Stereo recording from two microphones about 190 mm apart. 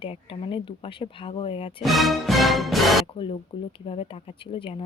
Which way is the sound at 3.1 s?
30° left (ahead or behind).